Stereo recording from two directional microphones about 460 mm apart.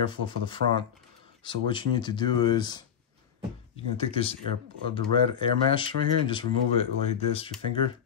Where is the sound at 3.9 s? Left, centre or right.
Centre.